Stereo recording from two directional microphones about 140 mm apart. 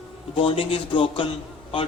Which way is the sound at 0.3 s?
40° left (ahead or behind).